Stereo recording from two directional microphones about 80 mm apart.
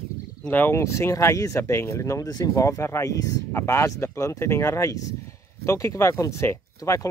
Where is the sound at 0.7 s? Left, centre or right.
Left.